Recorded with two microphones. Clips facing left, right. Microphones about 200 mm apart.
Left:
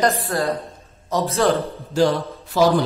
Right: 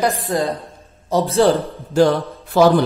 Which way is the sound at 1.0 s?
30° right (ahead or behind).